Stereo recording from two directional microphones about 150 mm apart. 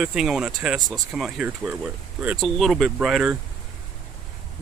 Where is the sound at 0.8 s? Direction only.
25° right (ahead or behind).